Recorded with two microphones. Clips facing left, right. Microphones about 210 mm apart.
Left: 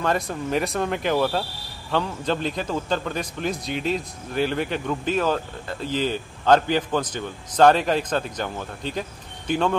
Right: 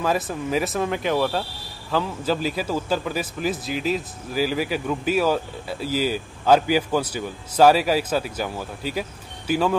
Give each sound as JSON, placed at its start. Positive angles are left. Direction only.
{"t": 0.0, "sound": "a man's voice", "side_deg": -5}